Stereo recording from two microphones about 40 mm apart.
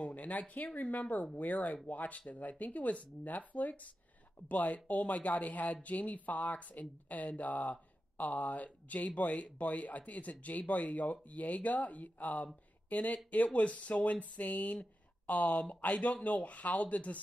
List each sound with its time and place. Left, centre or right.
0.0 s speech: left